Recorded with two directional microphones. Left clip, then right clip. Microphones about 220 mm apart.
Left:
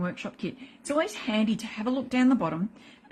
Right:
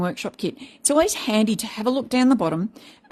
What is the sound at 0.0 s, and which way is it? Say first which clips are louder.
A woman's voice: right 8 dB; 50° right (ahead or behind).